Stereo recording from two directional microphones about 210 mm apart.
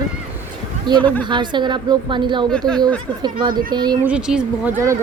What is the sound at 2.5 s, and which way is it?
Speech, 5° left (ahead or behind).